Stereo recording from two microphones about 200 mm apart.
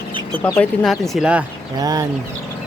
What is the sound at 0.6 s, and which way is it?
Speech, centre (ahead or behind).